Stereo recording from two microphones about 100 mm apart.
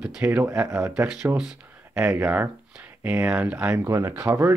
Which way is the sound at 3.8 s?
25° right (ahead or behind).